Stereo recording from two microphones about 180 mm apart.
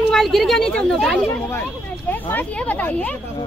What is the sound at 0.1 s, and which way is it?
Speech, centre (ahead or behind).